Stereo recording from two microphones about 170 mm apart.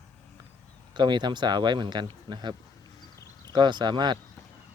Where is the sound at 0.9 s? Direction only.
25° right (ahead or behind).